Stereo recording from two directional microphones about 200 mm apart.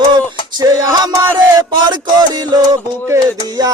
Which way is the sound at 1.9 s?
20° right (ahead or behind).